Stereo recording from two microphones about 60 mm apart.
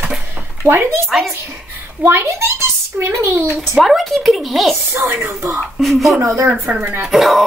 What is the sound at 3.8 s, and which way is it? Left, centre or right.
Speech, centre.